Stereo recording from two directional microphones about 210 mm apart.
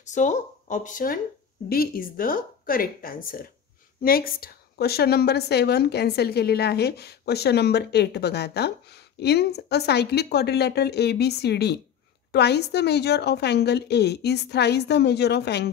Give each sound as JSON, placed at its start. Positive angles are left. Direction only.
{"t": 0.0, "sound": "a woman's voice", "side_deg": 35}